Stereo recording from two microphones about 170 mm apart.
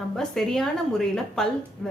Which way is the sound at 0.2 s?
Centre (ahead or behind).